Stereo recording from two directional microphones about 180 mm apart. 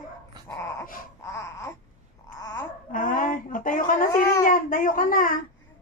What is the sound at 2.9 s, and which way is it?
Speech, 45° left (ahead or behind).